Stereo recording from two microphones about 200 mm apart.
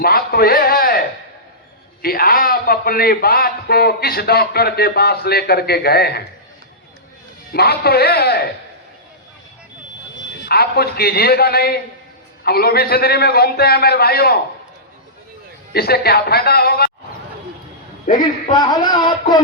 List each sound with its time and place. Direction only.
0.0 s music: 50° left (ahead or behind)
2.0 s a man's voice: 50° left (ahead or behind)
7.5 s a man's voice: 50° left (ahead or behind)
10.4 s a man's voice: 50° left (ahead or behind)
15.7 s a man's voice: 50° left (ahead or behind)
18.0 s a man's voice: 40° left (ahead or behind)
18.5 s a man's voice: 20° left (ahead or behind)